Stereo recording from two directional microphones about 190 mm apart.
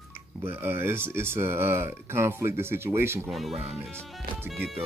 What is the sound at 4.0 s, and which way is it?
Speech, centre (ahead or behind).